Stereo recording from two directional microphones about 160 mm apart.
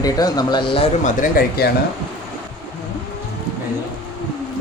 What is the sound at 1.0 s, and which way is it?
Speech, 55° left (ahead or behind).